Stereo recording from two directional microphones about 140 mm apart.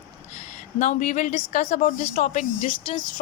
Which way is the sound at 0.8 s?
60° left (ahead or behind).